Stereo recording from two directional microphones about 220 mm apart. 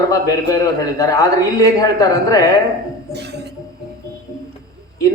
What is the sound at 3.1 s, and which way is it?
Music, 50° right (ahead or behind).